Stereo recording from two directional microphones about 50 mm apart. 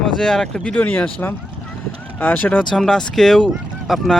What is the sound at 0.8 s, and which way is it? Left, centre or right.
Speech, left.